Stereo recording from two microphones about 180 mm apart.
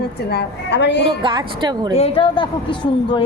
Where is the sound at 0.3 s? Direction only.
70° left (ahead or behind).